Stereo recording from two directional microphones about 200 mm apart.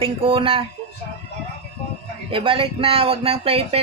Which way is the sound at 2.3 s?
25° right (ahead or behind).